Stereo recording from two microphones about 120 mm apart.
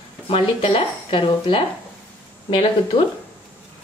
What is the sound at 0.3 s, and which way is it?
Speech, 50° left (ahead or behind).